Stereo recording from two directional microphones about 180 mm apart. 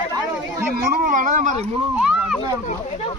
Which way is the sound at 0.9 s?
50° right (ahead or behind).